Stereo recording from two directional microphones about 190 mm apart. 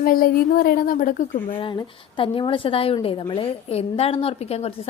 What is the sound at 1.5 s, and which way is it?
A woman's voice, 25° left (ahead or behind).